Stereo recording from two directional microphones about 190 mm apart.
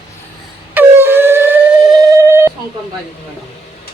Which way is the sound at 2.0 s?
15° right (ahead or behind).